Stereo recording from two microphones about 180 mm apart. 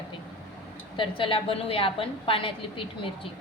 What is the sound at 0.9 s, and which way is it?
A woman's voice, 30° left (ahead or behind).